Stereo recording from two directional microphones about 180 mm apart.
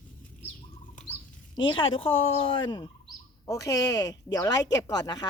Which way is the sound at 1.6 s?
25° left (ahead or behind).